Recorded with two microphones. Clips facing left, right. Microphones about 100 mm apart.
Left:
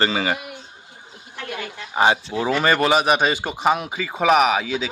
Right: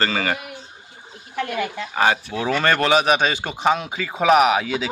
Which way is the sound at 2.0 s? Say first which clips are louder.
Left 2 dB; 20° left (ahead or behind).